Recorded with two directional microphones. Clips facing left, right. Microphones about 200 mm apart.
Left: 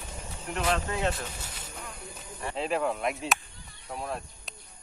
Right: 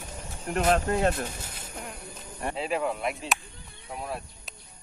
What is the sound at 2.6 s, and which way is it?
Speech, 5° right (ahead or behind).